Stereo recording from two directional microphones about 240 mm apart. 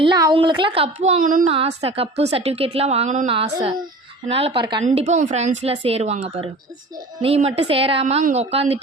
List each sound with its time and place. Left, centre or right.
0.0 s a woman's voice: centre
4.8 s a woman's voice: right